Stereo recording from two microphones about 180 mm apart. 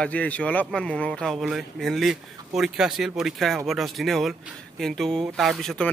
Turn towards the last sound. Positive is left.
turn(degrees=5)  # may be behind; listen again after turning